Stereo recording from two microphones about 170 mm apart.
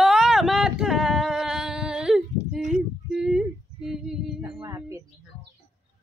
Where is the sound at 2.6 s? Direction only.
45° right (ahead or behind).